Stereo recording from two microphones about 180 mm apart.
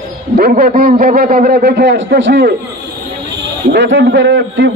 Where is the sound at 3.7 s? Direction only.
85° right.